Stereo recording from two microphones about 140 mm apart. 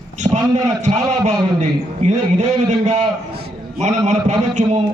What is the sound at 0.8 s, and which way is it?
A man's voice, 55° right (ahead or behind).